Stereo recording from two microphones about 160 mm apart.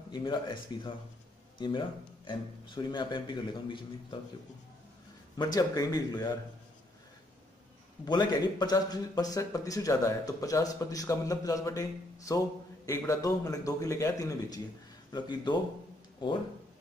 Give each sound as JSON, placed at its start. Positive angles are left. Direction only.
{"t": 0.1, "sound": "a man's voice", "side_deg": 30}
{"t": 5.4, "sound": "a man's voice", "side_deg": 25}
{"t": 8.0, "sound": "a man's voice", "side_deg": 25}